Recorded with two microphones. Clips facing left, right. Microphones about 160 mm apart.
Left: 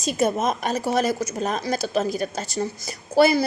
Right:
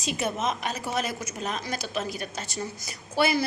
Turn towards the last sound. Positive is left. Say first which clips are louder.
# left 7 dB
turn(degrees=40)  # may be behind; listen again after turning